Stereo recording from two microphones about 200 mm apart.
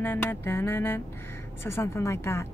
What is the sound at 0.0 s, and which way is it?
A woman's voice, 10° left (ahead or behind).